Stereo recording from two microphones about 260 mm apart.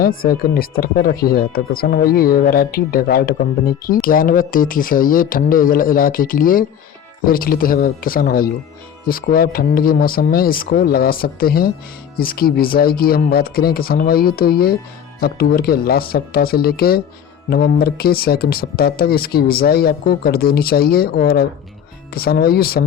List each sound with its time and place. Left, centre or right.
0.0 s speech: left